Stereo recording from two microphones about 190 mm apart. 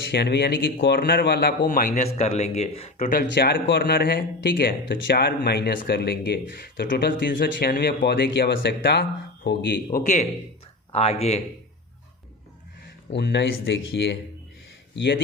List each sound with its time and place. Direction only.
0.1 s speech: 60° left (ahead or behind); by 3.1 s 35° left (ahead or behind)
3.1 s speech: 50° left (ahead or behind)
10.9 s speech: 35° left (ahead or behind)
13.1 s speech: 65° left (ahead or behind)